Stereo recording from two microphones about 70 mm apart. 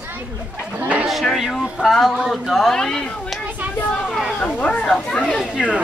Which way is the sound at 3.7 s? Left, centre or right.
Left.